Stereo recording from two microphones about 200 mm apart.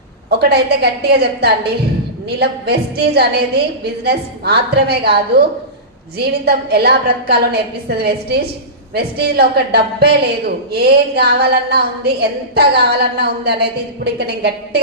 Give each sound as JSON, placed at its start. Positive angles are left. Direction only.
{"t": 0.3, "sound": "a woman's voice", "side_deg": -55}